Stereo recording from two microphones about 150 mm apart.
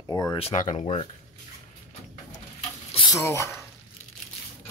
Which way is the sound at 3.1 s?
20° left (ahead or behind).